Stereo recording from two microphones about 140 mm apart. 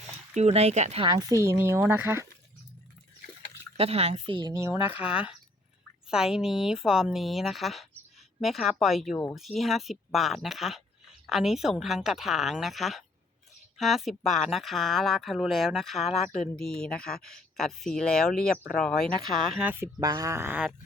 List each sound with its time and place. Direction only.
0.3 s speech: 50° right (ahead or behind)
1.3 s speech: 20° right (ahead or behind)
3.8 s speech: 45° right (ahead or behind)
4.4 s speech: 25° right (ahead or behind)
5.0 s speech: 10° right (ahead or behind)
16.0 s speech: 50° left (ahead or behind)
16.6 s speech: 5° left (ahead or behind)
19.8 s speech: 25° right (ahead or behind)